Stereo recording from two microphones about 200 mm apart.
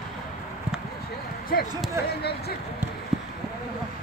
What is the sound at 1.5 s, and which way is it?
Basketball bounce, 50° left (ahead or behind).